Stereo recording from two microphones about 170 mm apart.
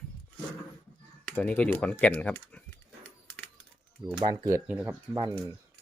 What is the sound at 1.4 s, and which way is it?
Speech, 5° left (ahead or behind).